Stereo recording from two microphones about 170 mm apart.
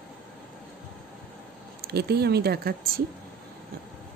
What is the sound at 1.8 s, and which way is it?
Speech, 70° right (ahead or behind).